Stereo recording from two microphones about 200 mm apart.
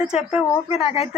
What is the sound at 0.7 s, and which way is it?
Speech, 30° left (ahead or behind).